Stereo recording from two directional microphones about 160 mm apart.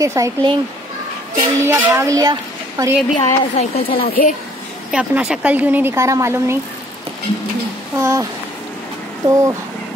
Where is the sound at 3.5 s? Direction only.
40° left (ahead or behind).